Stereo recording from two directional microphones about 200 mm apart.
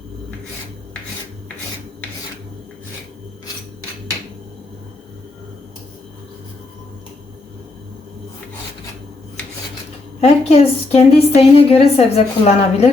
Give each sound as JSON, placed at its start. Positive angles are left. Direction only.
{"t": 10.2, "sound": "a woman's voice", "side_deg": 30}